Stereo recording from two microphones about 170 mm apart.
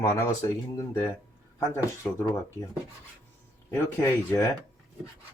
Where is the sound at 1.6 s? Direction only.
15° left (ahead or behind).